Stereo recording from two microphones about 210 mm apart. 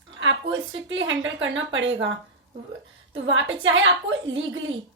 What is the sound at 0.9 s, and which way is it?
A woman's voice, 65° right (ahead or behind).